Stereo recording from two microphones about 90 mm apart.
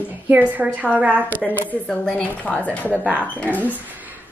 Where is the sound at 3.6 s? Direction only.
20° right (ahead or behind).